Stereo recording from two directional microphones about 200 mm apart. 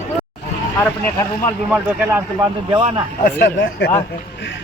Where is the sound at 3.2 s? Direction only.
55° left (ahead or behind).